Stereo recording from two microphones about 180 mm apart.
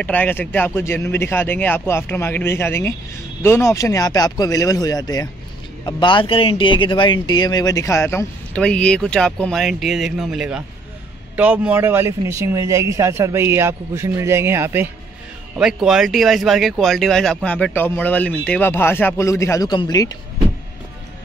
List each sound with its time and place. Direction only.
0.0 s a man's voice: 10° left (ahead or behind)